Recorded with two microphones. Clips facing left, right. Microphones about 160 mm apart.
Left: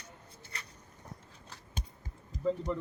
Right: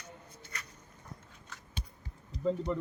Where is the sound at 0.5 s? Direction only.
30° left (ahead or behind).